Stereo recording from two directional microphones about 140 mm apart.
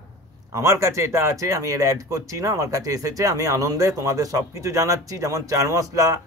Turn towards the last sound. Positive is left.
turn(degrees=-25)  # may be behind; listen again after turning